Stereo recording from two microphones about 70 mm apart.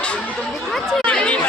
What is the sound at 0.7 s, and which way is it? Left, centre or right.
Chatter, centre.